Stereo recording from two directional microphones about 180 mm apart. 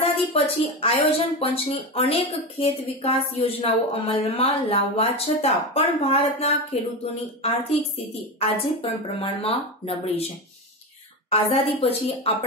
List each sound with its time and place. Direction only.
0.3 s speech: 30° left (ahead or behind)
8.4 s speech: 30° left (ahead or behind)
11.2 s speech: 35° left (ahead or behind)